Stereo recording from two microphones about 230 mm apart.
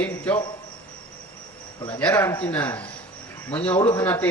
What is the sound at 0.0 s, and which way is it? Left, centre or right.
Cricket, centre.